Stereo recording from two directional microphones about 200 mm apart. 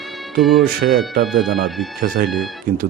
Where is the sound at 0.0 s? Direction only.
Centre (ahead or behind).